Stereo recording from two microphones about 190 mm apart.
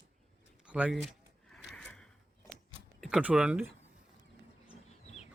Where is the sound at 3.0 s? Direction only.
5° right (ahead or behind).